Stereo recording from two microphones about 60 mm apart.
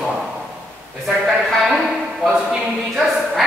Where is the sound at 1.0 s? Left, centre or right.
Centre.